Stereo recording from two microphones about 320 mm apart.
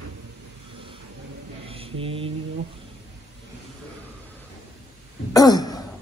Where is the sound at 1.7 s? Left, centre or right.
Centre.